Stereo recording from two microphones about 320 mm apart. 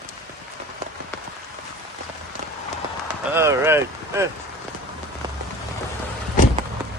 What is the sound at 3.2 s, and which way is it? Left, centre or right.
Speech, centre.